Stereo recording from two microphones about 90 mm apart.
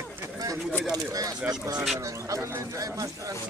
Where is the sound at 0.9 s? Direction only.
40° right (ahead or behind).